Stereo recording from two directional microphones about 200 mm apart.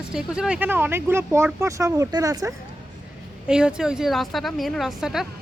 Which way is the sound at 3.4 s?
5° right (ahead or behind).